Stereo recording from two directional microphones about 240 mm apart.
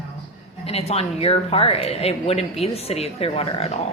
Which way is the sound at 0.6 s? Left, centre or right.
Left.